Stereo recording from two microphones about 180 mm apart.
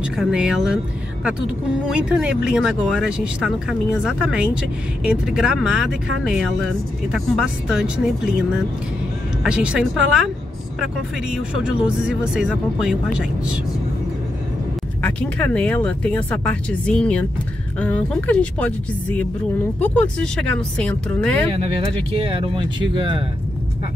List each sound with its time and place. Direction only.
0.0 s speech: 5° right (ahead or behind)
1.9 s speech: 5° right (ahead or behind)
9.4 s speech: 5° right (ahead or behind)
15.0 s speech: 10° left (ahead or behind)
21.6 s speech: 30° right (ahead or behind)